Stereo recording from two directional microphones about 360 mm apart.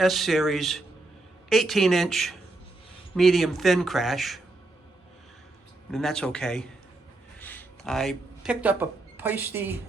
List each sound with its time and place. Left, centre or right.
0.0 s speech: centre
5.9 s speech: centre